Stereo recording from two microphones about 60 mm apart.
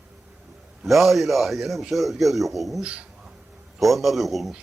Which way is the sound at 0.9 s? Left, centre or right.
Centre.